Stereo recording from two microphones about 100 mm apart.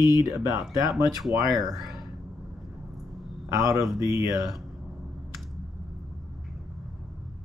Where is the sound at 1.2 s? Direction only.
Centre (ahead or behind).